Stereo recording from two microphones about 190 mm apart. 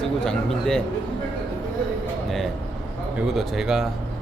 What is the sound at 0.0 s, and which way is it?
Speech, 5° left (ahead or behind).